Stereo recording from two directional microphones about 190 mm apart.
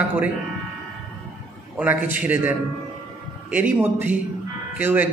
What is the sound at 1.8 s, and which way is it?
A man's voice, 10° right (ahead or behind).